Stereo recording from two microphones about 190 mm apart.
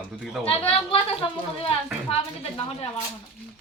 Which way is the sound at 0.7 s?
30° left (ahead or behind).